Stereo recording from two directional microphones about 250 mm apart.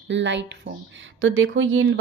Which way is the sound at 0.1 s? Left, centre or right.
Right.